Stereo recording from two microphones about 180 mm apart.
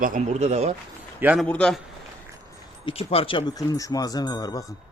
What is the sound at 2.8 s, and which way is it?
A man's voice, 30° left (ahead or behind).